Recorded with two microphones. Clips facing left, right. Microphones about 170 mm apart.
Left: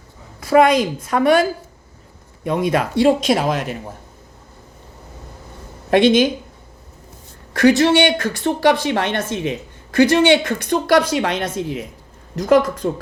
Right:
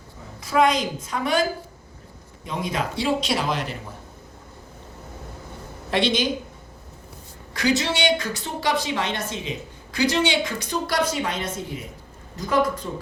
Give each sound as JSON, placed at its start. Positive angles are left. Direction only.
{"t": 0.3, "sound": "speech", "side_deg": 60}
{"t": 5.9, "sound": "speech", "side_deg": 50}
{"t": 7.5, "sound": "speech", "side_deg": 60}
{"t": 12.8, "sound": "speech", "side_deg": 70}